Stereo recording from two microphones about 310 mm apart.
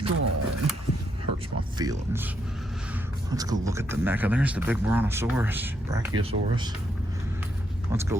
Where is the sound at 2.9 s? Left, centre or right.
Centre.